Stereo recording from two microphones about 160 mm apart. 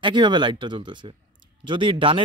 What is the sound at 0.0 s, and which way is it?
Speech, 30° right (ahead or behind).